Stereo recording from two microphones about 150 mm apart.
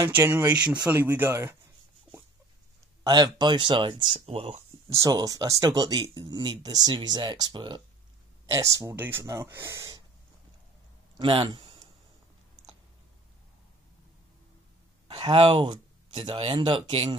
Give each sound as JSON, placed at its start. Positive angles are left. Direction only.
{"t": 0.2, "sound": "speech", "side_deg": -15}
{"t": 3.0, "sound": "speech", "side_deg": -30}
{"t": 4.8, "sound": "speech", "side_deg": -20}
{"t": 11.1, "sound": "a sound", "side_deg": -30}
{"t": 15.0, "sound": "speech", "side_deg": -35}